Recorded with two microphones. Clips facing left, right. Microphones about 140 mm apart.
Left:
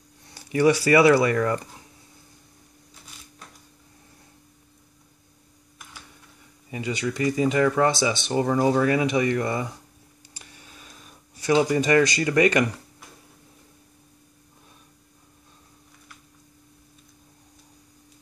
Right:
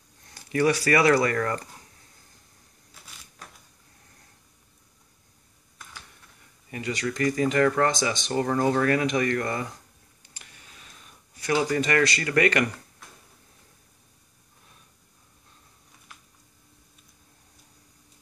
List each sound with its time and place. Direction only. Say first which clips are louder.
0.3 s speech: left 3 dB; 25° left (ahead or behind)
1.2 s speech: left 3 dB; 15° left (ahead or behind)
6.7 s speech: left 2 dB; 10° left (ahead or behind)
11.4 s speech: left 4 dB; 15° left (ahead or behind)